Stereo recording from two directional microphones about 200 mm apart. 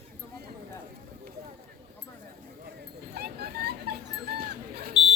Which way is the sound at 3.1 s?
55° right (ahead or behind).